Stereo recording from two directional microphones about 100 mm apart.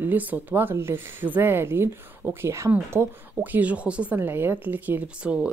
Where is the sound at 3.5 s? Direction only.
15° right (ahead or behind).